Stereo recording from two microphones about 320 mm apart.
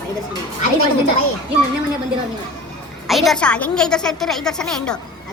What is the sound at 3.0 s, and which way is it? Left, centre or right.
A woman's voice, centre.